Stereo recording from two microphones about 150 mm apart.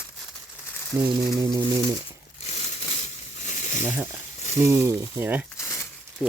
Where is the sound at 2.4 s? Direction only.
45° left (ahead or behind).